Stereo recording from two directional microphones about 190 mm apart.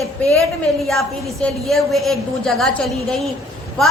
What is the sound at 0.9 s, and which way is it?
Music, 5° left (ahead or behind).